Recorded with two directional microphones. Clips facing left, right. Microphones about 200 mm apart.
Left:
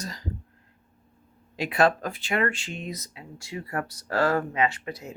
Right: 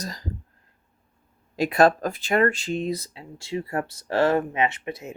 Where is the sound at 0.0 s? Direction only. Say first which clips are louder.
Right 2 dB; 40° right (ahead or behind).